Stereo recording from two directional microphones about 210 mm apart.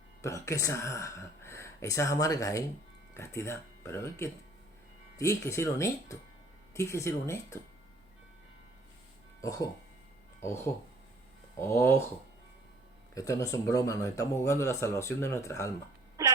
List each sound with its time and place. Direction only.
0.2 s speech: 15° left (ahead or behind)
9.4 s speech: 15° left (ahead or behind)
11.6 s speech: 10° left (ahead or behind)
13.1 s speech: 15° left (ahead or behind)
16.2 s hiccup: 15° right (ahead or behind)